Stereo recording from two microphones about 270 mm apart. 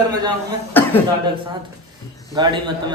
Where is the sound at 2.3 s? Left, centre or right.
Centre.